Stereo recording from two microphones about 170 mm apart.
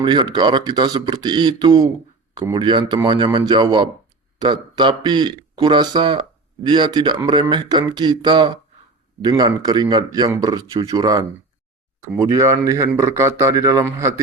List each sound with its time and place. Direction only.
0.0 s a man's voice: 25° right (ahead or behind)